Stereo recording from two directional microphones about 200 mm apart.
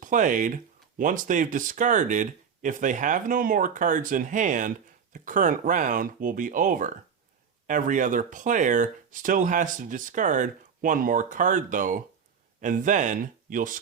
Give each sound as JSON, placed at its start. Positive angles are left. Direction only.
{"t": 0.0, "sound": "speech", "side_deg": -40}